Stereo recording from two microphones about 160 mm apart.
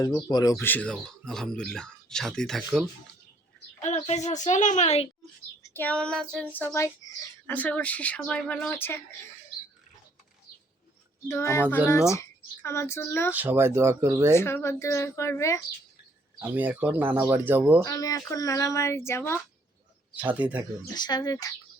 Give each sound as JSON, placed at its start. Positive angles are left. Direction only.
{"t": 0.0, "sound": "speech", "side_deg": 25}
{"t": 3.8, "sound": "a woman's voice", "side_deg": 45}
{"t": 5.7, "sound": "speech", "side_deg": 10}
{"t": 7.5, "sound": "speech", "side_deg": 10}
{"t": 11.3, "sound": "speech", "side_deg": 15}
{"t": 13.3, "sound": "speech", "side_deg": -10}
{"t": 14.3, "sound": "speech", "side_deg": 15}
{"t": 16.4, "sound": "speech", "side_deg": -10}
{"t": 17.8, "sound": "speech", "side_deg": 20}
{"t": 20.1, "sound": "speech", "side_deg": -10}
{"t": 20.8, "sound": "speech", "side_deg": 25}